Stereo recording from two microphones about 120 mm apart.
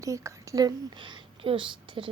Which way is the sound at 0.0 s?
25° right (ahead or behind).